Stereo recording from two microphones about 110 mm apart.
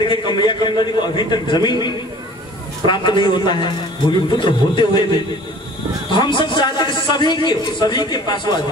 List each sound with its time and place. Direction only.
0.0 s a man's voice: 45° left (ahead or behind)
2.9 s a man's voice: 45° left (ahead or behind)